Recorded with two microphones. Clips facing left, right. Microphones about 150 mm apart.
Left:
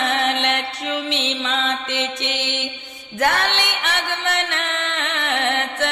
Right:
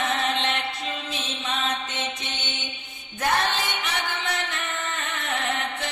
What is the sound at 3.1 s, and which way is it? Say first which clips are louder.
Music: left 4 dB; 75° left (ahead or behind).